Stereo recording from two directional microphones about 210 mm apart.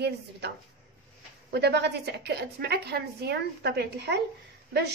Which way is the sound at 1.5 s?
50° right (ahead or behind).